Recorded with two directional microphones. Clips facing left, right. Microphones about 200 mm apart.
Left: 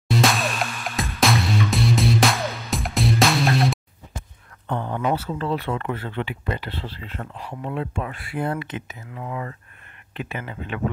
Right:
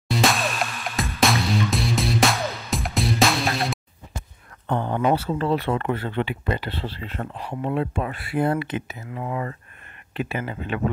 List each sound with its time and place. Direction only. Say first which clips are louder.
0.1 s music: left 1 dB; centre (ahead or behind)
4.6 s speech: right 3 dB; 30° right (ahead or behind)
7.3 s speech: right 5 dB; 20° right (ahead or behind)
7.7 s speech: right 3 dB; 40° right (ahead or behind)
8.5 s speech: right 4 dB; 10° right (ahead or behind)
9.2 s speech: right 2 dB; 35° right (ahead or behind)